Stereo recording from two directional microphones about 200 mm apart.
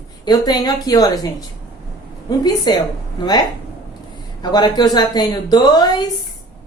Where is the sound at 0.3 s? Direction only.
20° left (ahead or behind).